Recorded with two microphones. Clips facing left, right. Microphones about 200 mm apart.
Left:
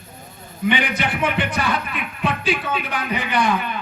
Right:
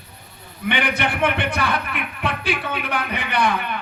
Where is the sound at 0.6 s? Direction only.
60° right (ahead or behind).